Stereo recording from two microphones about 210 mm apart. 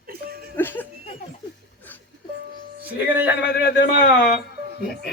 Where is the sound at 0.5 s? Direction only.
10° left (ahead or behind).